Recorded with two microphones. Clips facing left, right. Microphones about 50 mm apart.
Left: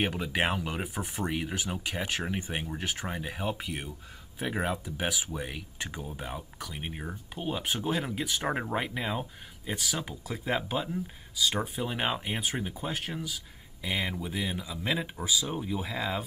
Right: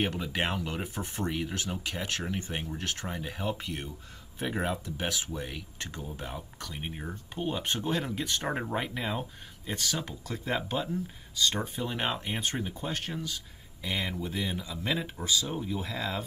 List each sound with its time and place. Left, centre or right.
0.0 s speech: centre